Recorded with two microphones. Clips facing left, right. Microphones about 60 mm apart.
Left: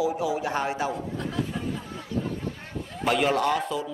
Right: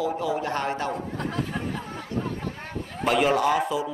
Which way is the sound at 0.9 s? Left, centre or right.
Right.